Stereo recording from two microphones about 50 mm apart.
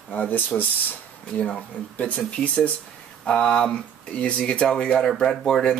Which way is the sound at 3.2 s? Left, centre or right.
Centre.